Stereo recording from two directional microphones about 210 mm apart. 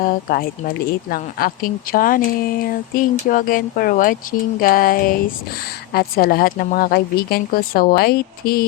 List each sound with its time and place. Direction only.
0.0 s a woman's voice: 40° left (ahead or behind)